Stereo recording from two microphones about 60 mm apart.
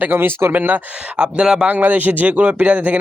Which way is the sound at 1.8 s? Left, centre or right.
Right.